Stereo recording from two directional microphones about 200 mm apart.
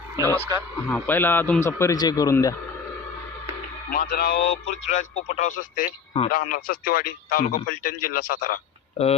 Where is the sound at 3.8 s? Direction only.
45° left (ahead or behind).